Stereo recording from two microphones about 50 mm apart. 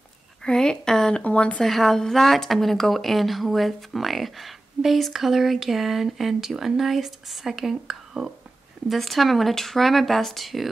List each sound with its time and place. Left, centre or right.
0.4 s a sound: centre
1.1 s speech: left
1.6 s speech: centre